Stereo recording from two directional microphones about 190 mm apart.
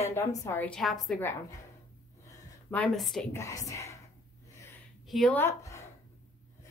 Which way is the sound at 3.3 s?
15° left (ahead or behind).